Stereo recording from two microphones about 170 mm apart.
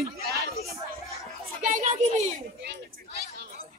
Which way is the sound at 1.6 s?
45° right (ahead or behind).